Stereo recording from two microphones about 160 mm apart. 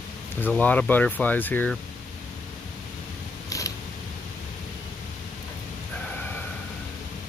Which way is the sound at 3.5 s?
20° left (ahead or behind).